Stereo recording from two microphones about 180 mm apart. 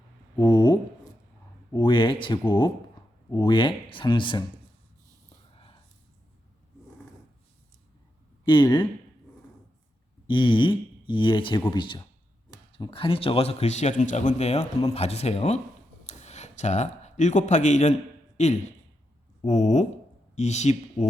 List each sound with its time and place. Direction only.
0.3 s a sound: 25° left (ahead or behind)
1.7 s speech: 25° left (ahead or behind)
8.4 s speech: 25° left (ahead or behind)
10.2 s a man's voice: 25° left (ahead or behind)